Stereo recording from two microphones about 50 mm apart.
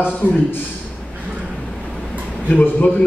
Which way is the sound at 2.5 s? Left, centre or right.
Left.